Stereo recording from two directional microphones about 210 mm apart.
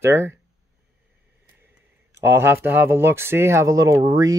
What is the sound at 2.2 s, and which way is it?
Speech, 10° right (ahead or behind).